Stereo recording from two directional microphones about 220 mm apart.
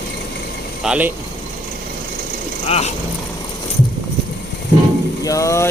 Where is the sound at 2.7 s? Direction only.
30° left (ahead or behind).